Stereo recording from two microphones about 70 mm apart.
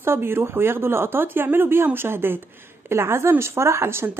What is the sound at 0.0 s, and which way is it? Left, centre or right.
Speech, right.